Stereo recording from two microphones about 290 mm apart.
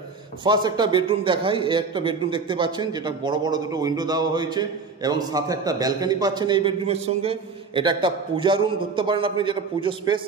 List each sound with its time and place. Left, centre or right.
0.4 s a man's voice: centre